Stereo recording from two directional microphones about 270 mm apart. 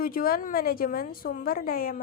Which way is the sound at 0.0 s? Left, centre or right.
Left.